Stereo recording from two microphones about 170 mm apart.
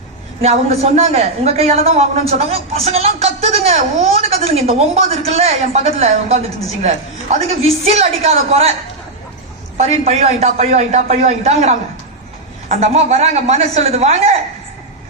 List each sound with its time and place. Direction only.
0.4 s a man's voice: 40° right (ahead or behind)
9.7 s a man's voice: 40° right (ahead or behind)